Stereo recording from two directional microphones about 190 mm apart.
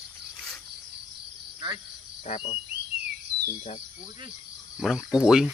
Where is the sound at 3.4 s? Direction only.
40° left (ahead or behind).